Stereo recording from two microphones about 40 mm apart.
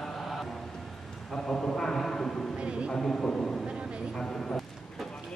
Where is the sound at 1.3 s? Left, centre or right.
Centre.